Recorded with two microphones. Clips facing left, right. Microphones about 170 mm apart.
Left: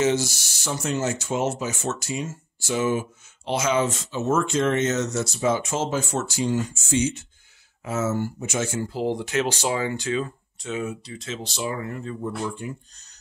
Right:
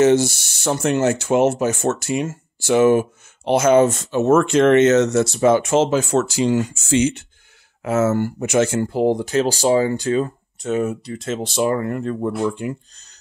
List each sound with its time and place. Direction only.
0.0 s speech: 55° right (ahead or behind); by 13.0 s 80° right